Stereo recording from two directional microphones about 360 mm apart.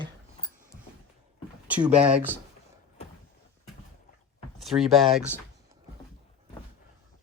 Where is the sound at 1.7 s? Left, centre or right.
Centre.